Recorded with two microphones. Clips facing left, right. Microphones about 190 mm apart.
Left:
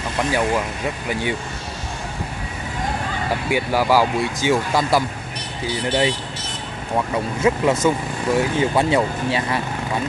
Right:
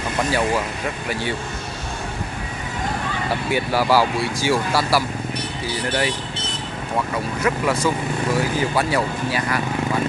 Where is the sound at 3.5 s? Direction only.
15° left (ahead or behind).